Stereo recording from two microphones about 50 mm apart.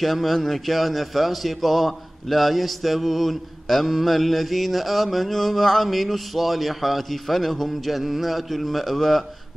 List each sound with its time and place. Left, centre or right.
0.0 s speech: centre